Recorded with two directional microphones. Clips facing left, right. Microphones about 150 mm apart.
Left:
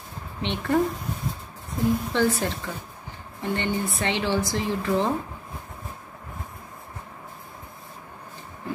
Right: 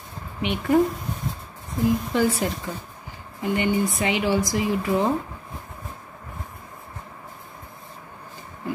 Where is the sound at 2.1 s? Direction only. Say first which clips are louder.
Right 1 dB; 10° right (ahead or behind).